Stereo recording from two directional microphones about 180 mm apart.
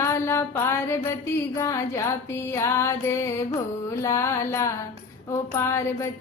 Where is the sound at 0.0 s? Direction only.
15° left (ahead or behind).